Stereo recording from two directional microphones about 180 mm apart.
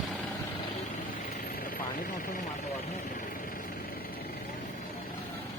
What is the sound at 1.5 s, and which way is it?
Helicopter, 55° left (ahead or behind).